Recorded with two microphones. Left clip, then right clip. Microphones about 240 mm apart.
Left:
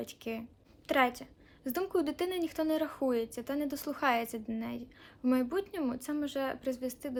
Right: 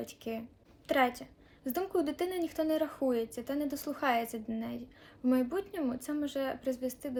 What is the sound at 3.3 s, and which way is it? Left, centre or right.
A woman's voice, centre.